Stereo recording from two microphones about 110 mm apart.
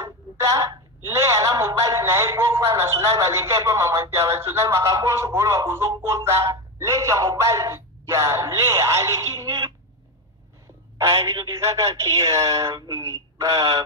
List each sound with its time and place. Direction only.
0.0 s a woman's voice: 30° right (ahead or behind)
11.0 s a woman's voice: 25° right (ahead or behind)